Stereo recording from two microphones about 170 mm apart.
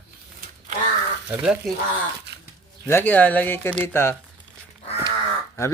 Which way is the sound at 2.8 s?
10° left (ahead or behind).